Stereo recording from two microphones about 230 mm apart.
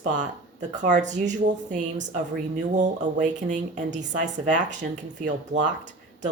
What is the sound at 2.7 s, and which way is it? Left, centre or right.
Speech, right.